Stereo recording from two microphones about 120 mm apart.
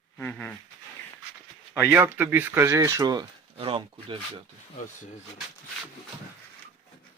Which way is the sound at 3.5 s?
50° right (ahead or behind).